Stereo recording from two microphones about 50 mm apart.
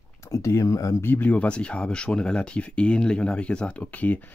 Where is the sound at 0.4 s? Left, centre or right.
Left.